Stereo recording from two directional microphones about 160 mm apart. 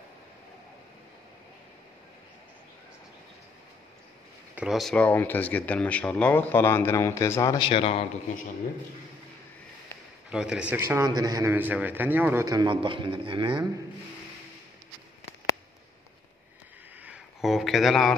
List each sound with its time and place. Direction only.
4.6 s speech: centre (ahead or behind); by 7.5 s 20° left (ahead or behind)
7.5 s a man's voice: 30° left (ahead or behind)
10.3 s a man's voice: 5° right (ahead or behind)
11.1 s a man's voice: 25° right (ahead or behind)
11.5 s a man's voice: 10° right (ahead or behind); by 13.7 s 30° right (ahead or behind)
17.0 s a sound: 5° right (ahead or behind)